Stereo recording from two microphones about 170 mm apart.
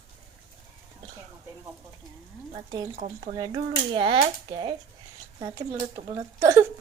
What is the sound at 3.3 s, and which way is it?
Speech, 25° right (ahead or behind).